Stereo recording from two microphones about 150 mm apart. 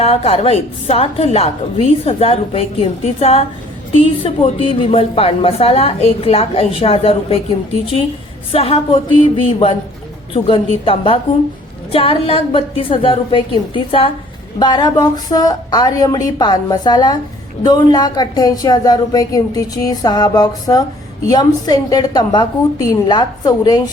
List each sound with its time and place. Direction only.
0.0 s a woman's voice: 40° left (ahead or behind)
8.5 s a woman's voice: 40° left (ahead or behind); by 23.9 s 25° left (ahead or behind)